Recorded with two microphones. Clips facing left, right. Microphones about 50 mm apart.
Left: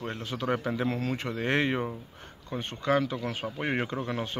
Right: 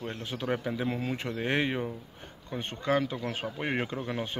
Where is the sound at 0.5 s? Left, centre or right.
Centre.